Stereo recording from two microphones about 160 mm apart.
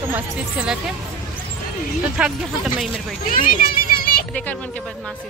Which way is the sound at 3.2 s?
60° left (ahead or behind).